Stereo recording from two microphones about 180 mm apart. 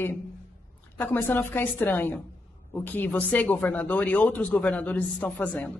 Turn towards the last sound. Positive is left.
turn(degrees=10)  # may be behind; listen again after turning